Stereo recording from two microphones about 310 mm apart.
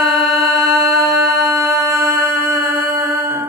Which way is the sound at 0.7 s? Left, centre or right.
Centre.